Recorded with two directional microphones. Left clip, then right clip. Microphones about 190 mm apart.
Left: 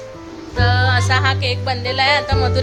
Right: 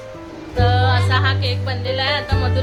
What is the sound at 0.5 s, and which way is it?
Music, 5° left (ahead or behind).